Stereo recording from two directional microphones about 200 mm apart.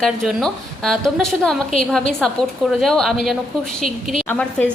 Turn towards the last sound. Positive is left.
turn(degrees=5)  # may be behind; listen again after turning